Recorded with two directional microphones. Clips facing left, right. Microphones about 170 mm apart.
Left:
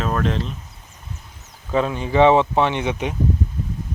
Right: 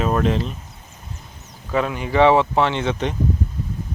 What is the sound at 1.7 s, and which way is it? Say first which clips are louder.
Speech: left 1 dB; 25° left (ahead or behind).